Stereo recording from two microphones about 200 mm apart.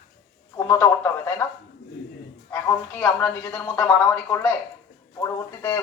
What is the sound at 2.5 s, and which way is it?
A man's voice, 10° left (ahead or behind).